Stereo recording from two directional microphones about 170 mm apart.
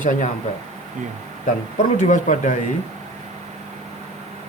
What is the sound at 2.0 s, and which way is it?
Speech, 45° left (ahead or behind).